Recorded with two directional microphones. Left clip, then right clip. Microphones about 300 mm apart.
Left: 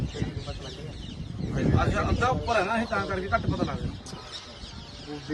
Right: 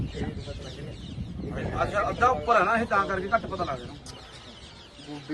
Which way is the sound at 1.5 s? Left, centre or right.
Centre.